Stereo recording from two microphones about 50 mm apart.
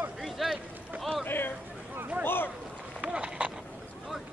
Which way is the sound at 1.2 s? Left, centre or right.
Left.